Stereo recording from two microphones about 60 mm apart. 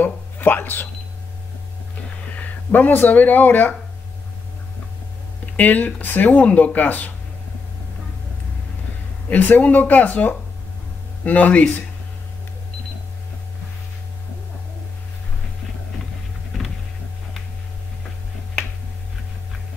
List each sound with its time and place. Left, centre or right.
0.0 s a sound: left
2.3 s speech: left
5.6 s speech: left
9.3 s speech: left
16.5 s power windows: centre